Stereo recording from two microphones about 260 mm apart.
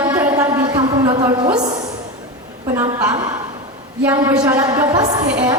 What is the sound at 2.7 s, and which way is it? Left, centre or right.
A woman's voice, centre.